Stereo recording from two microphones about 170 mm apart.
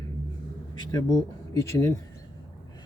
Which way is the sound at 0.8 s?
25° left (ahead or behind).